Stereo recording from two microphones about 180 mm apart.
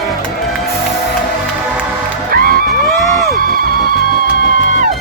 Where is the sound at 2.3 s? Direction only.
55° right (ahead or behind).